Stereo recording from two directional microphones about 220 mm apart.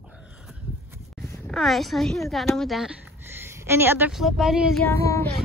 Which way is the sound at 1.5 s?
Centre (ahead or behind).